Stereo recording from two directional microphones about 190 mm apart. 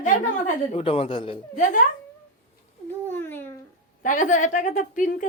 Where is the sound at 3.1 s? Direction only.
10° left (ahead or behind).